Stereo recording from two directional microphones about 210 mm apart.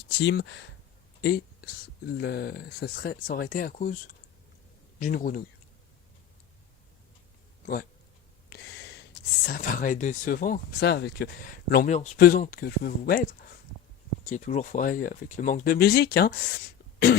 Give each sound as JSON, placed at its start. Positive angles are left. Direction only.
{"t": 0.2, "sound": "speech", "side_deg": 55}
{"t": 1.2, "sound": "a man's voice", "side_deg": 45}
{"t": 8.4, "sound": "a sound", "side_deg": 50}
{"t": 9.5, "sound": "speech", "side_deg": 40}